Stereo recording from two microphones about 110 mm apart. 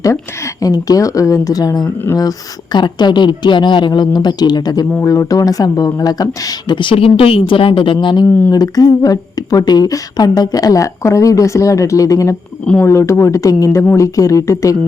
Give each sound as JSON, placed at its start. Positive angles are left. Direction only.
{"t": 0.0, "sound": "a woman's voice", "side_deg": 30}